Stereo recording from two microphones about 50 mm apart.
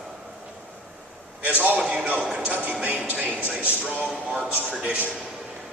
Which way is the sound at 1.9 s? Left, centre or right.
Right.